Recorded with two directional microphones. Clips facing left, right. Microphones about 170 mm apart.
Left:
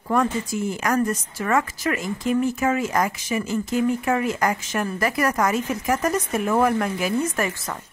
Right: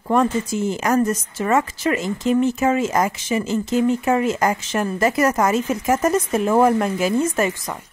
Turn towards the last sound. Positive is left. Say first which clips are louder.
# right 4 dB
turn(degrees=-25)  # may be behind; listen again after turning